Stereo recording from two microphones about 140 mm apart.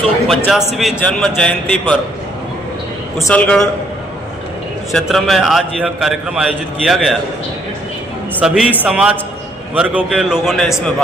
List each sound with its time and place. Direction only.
0.3 s a man's voice: centre (ahead or behind)
3.2 s a man's voice: 10° left (ahead or behind)
4.9 s a man's voice: centre (ahead or behind)
8.4 s a man's voice: 5° right (ahead or behind)